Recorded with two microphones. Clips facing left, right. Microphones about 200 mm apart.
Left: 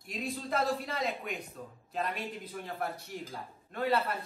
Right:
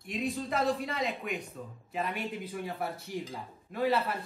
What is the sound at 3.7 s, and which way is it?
Speech, centre (ahead or behind).